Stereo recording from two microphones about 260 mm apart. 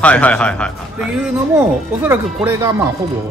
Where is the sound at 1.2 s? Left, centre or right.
Centre.